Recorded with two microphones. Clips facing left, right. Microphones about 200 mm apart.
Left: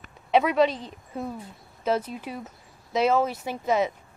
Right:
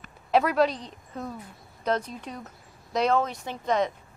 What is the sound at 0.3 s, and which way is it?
A woman's voice, centre (ahead or behind).